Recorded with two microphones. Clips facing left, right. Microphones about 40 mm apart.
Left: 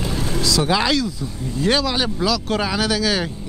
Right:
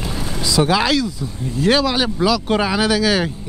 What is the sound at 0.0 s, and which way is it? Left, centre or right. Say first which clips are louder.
Vehicle: left 2 dB; centre.